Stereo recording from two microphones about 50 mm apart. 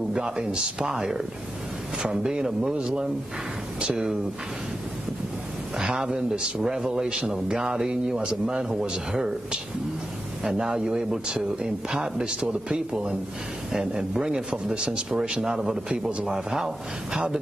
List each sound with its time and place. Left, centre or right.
0.1 s a man's voice: centre
3.8 s a man's voice: centre
5.8 s a man's voice: centre
15.9 s speech: right
16.3 s a man's voice: centre